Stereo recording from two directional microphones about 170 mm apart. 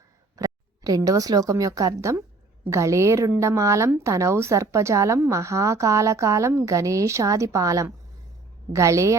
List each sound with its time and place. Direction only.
0.3 s a woman's voice: 20° right (ahead or behind)